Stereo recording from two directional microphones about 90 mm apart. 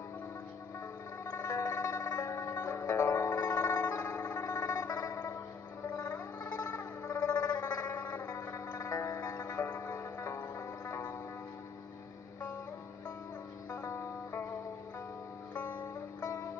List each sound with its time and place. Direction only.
1.3 s music: 30° left (ahead or behind)
7.1 s a sound: 40° left (ahead or behind)
8.4 s music: 35° left (ahead or behind)
9.7 s music: 20° left (ahead or behind)
9.9 s music: 30° left (ahead or behind)
13.9 s music: 25° left (ahead or behind)
15.5 s music: 20° left (ahead or behind)